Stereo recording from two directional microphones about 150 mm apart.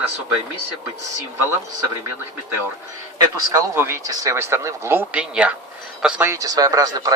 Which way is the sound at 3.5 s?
15° right (ahead or behind).